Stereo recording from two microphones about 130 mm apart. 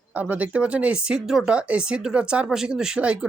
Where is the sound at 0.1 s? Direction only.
10° right (ahead or behind).